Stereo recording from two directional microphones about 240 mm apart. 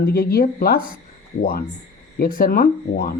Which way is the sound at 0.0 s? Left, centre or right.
Left.